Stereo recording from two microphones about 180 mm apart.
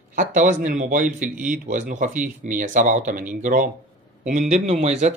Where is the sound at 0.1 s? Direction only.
45° right (ahead or behind).